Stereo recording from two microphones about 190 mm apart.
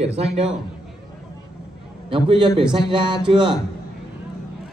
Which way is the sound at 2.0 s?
25° right (ahead or behind).